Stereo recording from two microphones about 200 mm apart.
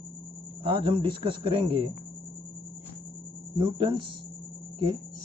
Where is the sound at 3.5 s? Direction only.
25° right (ahead or behind).